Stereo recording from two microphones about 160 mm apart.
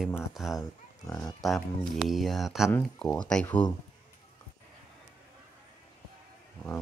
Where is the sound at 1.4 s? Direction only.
Centre (ahead or behind).